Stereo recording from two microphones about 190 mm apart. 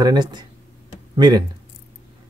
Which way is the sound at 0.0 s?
20° right (ahead or behind).